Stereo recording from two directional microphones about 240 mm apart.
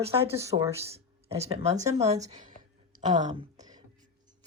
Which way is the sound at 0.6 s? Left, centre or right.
Centre.